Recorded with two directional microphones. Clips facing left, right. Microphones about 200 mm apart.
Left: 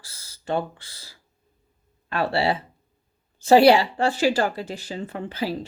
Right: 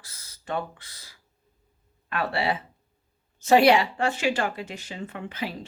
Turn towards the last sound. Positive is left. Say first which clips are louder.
# left 5 dB
turn(degrees=35)  # may be behind; listen again after turning